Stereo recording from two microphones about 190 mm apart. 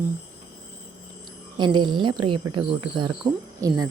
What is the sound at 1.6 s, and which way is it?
Speech, 25° right (ahead or behind).